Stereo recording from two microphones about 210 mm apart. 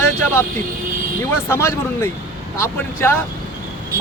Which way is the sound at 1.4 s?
10° left (ahead or behind).